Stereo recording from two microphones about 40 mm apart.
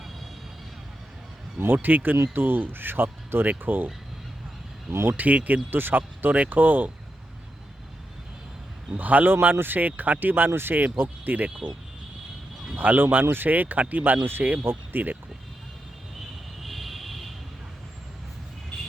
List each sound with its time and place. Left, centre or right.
1.7 s speech: right
4.9 s speech: right
5.1 s speech: right
5.7 s speech: right
6.0 s speech: right
9.0 s speech: right
9.2 s speech: right
10.5 s speech: right
11.3 s speech: right
13.2 s speech: right
13.5 s speech: right
14.6 s speech: right
16.6 s vehicle: centre